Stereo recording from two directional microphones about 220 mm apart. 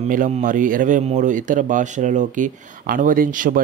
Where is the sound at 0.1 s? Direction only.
35° right (ahead or behind).